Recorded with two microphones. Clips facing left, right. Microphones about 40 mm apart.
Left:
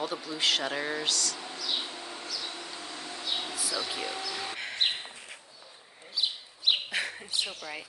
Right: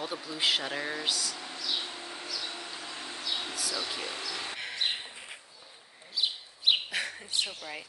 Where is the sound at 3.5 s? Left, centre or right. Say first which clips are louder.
Left 1 dB; centre.